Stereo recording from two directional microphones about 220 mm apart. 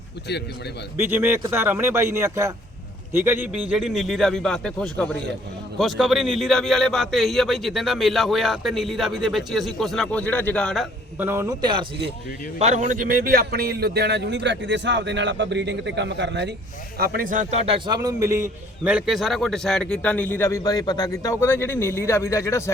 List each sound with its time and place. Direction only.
1.0 s a man's voice: 10° right (ahead or behind)
11.2 s a man's voice: 10° right (ahead or behind)
12.5 s speech: 30° right (ahead or behind)
17.7 s a man's voice: 20° right (ahead or behind)
18.9 s speech: 5° right (ahead or behind); by 22.7 s 10° left (ahead or behind)